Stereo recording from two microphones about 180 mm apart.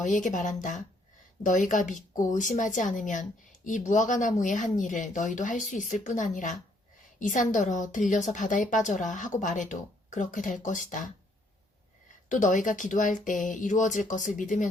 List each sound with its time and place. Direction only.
0.0 s a woman's voice: 45° left (ahead or behind)
12.3 s a woman's voice: 45° left (ahead or behind)